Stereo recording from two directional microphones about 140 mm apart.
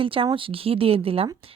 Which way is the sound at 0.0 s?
40° right (ahead or behind).